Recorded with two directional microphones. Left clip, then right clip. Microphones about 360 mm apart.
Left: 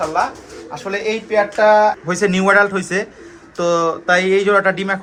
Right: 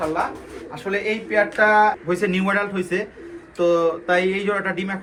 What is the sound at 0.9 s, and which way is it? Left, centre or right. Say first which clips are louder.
Speech: left 3 dB; centre.